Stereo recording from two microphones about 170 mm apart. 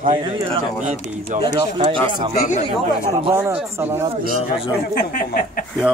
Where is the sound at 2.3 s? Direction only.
60° left (ahead or behind).